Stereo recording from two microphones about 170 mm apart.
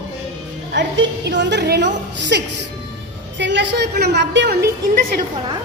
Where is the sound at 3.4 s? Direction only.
90° right.